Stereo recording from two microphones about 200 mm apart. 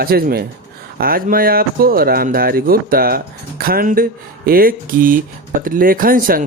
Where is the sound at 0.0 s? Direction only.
50° right (ahead or behind).